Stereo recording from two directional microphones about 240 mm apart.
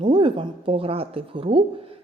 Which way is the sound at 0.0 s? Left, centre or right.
Right.